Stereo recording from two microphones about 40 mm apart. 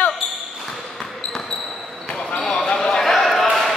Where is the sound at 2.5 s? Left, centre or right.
Left.